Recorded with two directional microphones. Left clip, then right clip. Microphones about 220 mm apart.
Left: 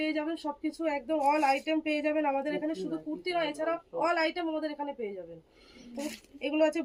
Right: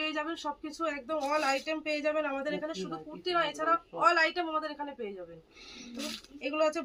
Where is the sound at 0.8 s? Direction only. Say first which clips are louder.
Left 3 dB; 15° right (ahead or behind).